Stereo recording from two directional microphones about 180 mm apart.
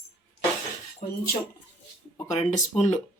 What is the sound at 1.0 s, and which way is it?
Keys jangling, 40° left (ahead or behind).